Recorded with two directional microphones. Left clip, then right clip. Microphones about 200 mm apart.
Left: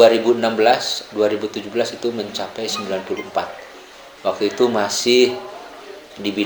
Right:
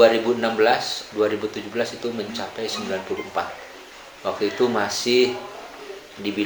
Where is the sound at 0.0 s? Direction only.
25° left (ahead or behind).